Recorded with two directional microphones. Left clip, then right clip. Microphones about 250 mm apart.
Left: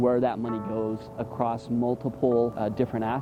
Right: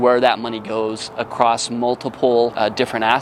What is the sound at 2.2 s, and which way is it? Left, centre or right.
Speech, right.